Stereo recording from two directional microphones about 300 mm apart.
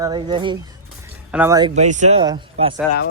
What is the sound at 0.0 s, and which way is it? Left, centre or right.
Speech, centre.